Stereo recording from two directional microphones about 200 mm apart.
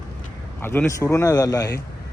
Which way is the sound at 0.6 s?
10° left (ahead or behind).